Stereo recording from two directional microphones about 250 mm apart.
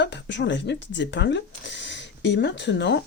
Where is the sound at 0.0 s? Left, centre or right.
Left.